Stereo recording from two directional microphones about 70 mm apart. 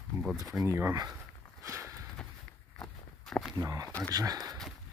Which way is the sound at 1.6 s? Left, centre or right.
Right.